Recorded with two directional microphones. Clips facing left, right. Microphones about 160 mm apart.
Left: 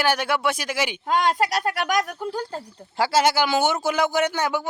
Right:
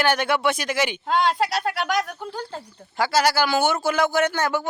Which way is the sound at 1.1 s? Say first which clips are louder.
Even; 45° left (ahead or behind).